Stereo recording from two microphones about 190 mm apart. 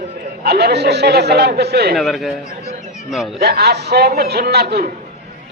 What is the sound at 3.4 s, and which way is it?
A man's voice, 55° right (ahead or behind).